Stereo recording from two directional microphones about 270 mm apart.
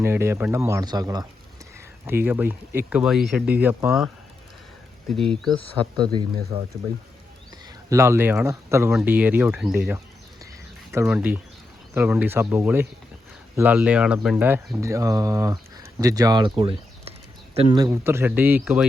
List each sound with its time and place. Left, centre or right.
0.0 s speech: centre
5.8 s speech: centre
7.9 s speech: centre